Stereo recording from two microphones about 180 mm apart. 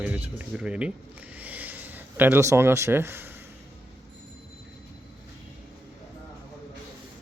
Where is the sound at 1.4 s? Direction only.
10° right (ahead or behind).